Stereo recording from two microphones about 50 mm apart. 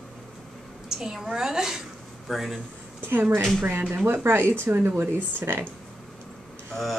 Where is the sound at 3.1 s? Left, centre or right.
Right.